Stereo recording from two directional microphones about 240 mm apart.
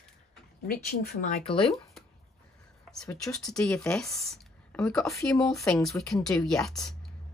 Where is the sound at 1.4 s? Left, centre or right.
Left.